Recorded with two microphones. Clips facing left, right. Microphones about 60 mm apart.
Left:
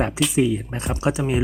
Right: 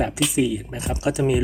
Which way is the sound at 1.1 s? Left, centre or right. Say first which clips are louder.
Right 3 dB; centre.